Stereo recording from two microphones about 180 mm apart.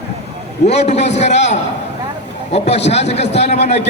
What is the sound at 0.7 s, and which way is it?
A man's voice, 40° left (ahead or behind).